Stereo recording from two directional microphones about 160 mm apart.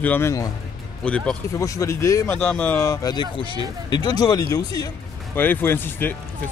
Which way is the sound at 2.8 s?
20° left (ahead or behind).